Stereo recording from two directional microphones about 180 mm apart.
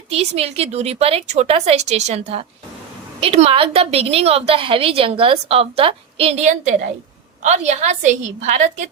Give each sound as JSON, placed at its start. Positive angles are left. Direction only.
{"t": 0.1, "sound": "a woman's voice", "side_deg": -35}